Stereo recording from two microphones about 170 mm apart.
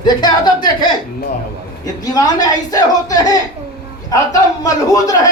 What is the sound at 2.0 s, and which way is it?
Speech, 20° left (ahead or behind).